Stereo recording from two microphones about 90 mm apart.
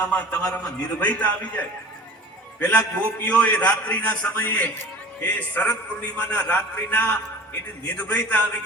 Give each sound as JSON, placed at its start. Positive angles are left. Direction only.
{"t": 0.0, "sound": "a man's voice", "side_deg": 15}